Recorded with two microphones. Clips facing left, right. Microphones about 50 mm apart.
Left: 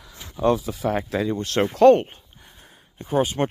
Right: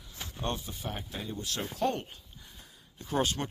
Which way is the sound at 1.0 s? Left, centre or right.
Left.